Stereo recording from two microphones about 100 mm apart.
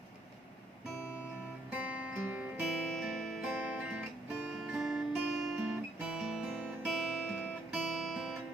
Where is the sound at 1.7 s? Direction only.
15° right (ahead or behind).